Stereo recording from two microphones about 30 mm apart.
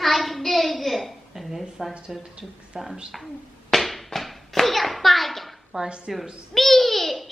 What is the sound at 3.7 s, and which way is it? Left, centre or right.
Hands, centre.